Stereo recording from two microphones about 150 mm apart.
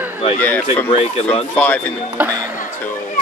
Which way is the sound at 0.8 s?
35° left (ahead or behind).